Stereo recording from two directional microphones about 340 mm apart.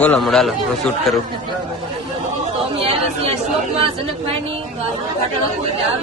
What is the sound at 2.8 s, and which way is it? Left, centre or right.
Chatter, centre.